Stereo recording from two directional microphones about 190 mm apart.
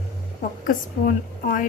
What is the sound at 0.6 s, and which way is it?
A woman's voice, 45° left (ahead or behind).